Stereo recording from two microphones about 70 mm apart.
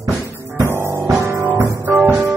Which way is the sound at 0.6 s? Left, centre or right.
Right.